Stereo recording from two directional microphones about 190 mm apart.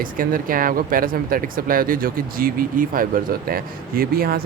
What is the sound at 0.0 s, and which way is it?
Speech, 45° right (ahead or behind).